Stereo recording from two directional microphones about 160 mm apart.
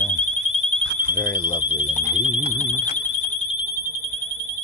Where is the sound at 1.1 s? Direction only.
25° left (ahead or behind).